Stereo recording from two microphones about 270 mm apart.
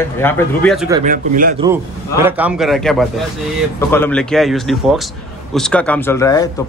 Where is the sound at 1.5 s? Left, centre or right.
Centre.